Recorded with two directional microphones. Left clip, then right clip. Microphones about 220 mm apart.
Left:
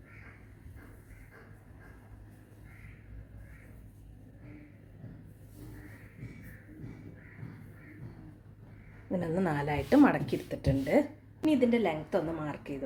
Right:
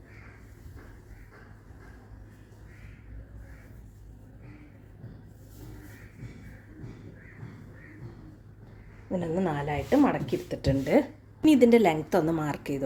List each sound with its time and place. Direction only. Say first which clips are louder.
9.0 s speech: right 2 dB; 5° left (ahead or behind)
10.5 s speech: right 4 dB; 15° right (ahead or behind)
11.4 s a woman's voice: right 8 dB; 45° right (ahead or behind)